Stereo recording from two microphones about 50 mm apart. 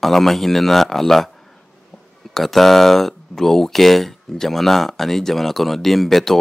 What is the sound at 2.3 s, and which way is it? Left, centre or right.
Speech, centre.